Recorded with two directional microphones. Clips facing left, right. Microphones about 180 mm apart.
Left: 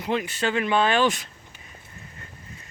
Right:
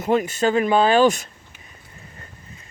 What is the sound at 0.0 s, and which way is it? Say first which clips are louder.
Speech: right 6 dB; 45° right (ahead or behind).